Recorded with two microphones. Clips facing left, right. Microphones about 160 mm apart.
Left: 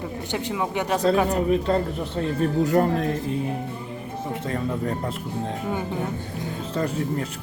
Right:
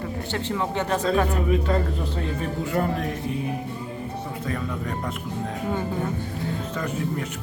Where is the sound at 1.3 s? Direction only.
35° left (ahead or behind).